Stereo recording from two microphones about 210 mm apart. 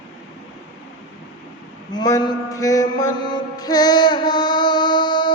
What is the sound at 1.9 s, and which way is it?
Mantra, 20° left (ahead or behind).